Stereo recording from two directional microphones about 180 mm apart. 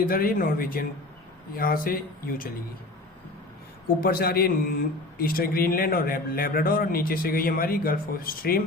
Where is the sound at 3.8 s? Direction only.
55° left (ahead or behind).